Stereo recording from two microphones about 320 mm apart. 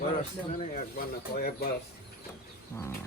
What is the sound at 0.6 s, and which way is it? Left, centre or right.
Speech, left.